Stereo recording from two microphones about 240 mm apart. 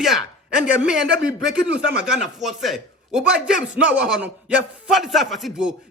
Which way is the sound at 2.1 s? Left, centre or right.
Centre.